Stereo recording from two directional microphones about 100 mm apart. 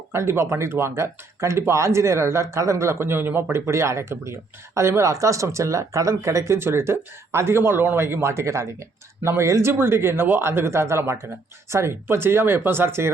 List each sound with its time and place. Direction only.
0.1 s speech: 25° right (ahead or behind)